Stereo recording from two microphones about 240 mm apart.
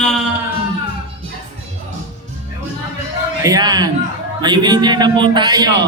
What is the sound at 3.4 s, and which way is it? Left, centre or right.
A man's voice, centre.